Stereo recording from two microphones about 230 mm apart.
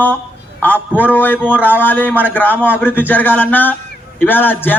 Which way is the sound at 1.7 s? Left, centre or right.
Centre.